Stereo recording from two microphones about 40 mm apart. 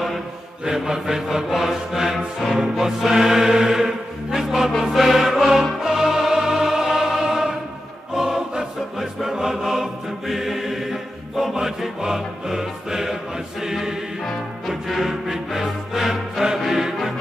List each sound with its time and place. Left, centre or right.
0.7 s music: centre
7.2 s choir: centre
12.0 s music: centre